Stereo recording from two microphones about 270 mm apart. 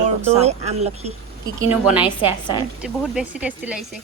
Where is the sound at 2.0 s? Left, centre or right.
Centre.